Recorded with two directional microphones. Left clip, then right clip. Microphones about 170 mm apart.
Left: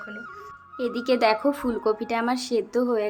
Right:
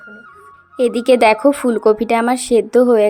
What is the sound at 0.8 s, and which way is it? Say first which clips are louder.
A woman's voice: right 11 dB; 45° right (ahead or behind).